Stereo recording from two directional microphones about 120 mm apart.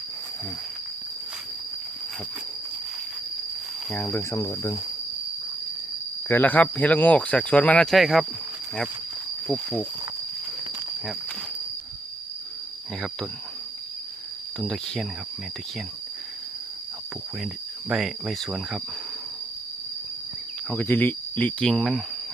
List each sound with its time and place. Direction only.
3.9 s speech: 15° left (ahead or behind)
6.2 s speech: 15° left (ahead or behind); by 8.3 s centre (ahead or behind)
9.5 s speech: 10° left (ahead or behind)
14.6 s cricket: 5° left (ahead or behind)
17.4 s cricket: 5° right (ahead or behind)
20.7 s speech: 15° left (ahead or behind)